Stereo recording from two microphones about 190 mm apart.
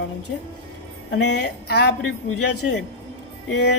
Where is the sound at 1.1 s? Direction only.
65° left (ahead or behind).